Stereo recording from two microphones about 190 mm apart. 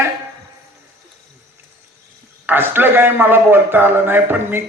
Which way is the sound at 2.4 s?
10° right (ahead or behind).